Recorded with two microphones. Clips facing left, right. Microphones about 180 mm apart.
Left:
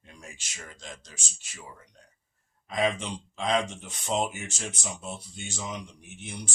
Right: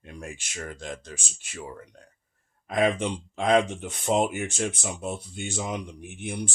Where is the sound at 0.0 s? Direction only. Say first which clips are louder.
Right 9 dB; 60° right (ahead or behind).